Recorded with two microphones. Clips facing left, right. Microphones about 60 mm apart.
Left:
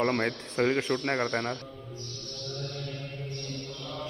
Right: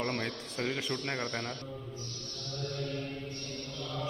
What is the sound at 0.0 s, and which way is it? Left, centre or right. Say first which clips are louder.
Speech: left 7 dB; left.